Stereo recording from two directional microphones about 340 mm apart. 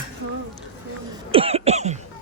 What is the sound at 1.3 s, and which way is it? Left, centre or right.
Cough, centre.